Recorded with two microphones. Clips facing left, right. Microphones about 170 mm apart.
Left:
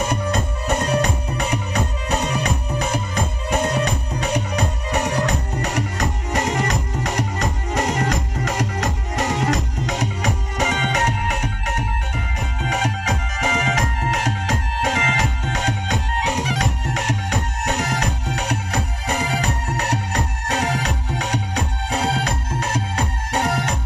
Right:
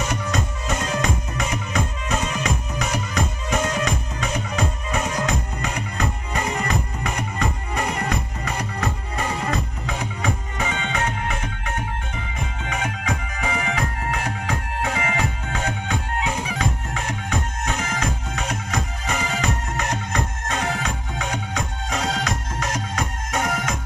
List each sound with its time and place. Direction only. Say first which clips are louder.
0.0 s music: left 3 dB; 55° left (ahead or behind)
3.5 s music: left 2 dB; 35° left (ahead or behind)
4.3 s music: left 3 dB; 70° left (ahead or behind)
6.4 s music: left 1 dB; 90° left; by 11.4 s 75° left (ahead or behind)
12.6 s music: left 4 dB; 75° left (ahead or behind)
19.0 s music: left 2 dB; 35° left (ahead or behind)